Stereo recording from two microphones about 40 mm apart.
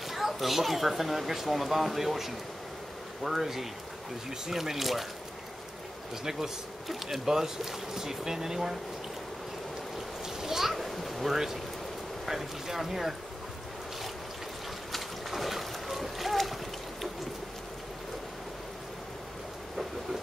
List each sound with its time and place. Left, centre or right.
0.1 s speech: centre
7.2 s speech: centre
10.2 s a sound: centre
12.3 s speech: centre
14.9 s boat: centre